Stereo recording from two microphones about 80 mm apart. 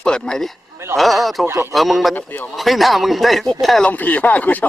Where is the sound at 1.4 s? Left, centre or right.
Right.